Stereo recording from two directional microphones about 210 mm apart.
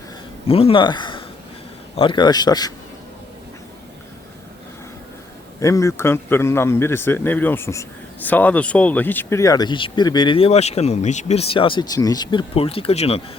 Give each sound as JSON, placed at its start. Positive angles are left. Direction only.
{"t": 0.4, "sound": "speech", "side_deg": 25}
{"t": 5.5, "sound": "a man's voice", "side_deg": 15}